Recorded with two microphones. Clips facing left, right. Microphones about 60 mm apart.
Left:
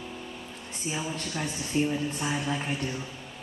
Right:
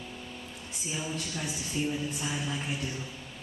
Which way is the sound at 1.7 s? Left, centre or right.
Left.